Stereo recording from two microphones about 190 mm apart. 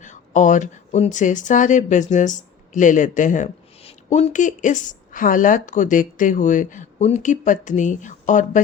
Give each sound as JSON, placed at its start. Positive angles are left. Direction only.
{"t": 0.0, "sound": "speech", "side_deg": 40}